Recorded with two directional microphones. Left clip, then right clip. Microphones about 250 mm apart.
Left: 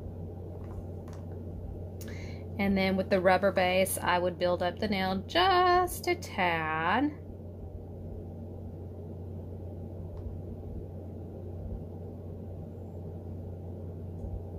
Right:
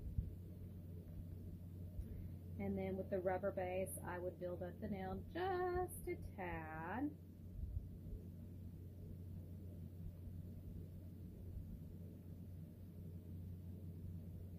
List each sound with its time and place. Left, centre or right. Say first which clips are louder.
2.5 s a woman's voice: left 16 dB; left